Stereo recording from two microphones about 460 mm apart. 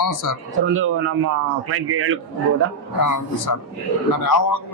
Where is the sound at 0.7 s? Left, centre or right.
Right.